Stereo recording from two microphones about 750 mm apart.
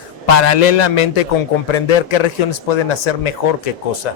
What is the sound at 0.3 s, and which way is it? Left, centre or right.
A man's voice, left.